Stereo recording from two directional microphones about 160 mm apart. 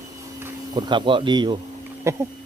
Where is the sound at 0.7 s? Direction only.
30° right (ahead or behind).